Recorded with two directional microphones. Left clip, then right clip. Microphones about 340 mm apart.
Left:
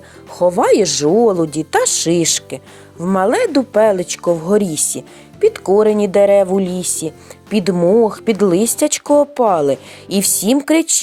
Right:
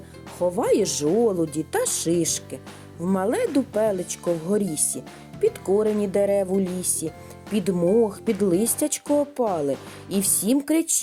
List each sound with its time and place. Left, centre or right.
0.3 s speech: right